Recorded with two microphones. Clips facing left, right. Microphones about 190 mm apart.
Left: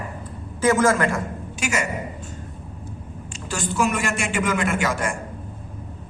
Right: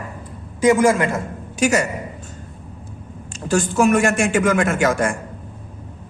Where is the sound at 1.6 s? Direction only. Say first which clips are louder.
Right 8 dB; 40° right (ahead or behind).